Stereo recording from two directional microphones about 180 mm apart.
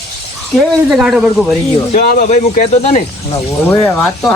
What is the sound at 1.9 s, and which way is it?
Speech, 40° left (ahead or behind).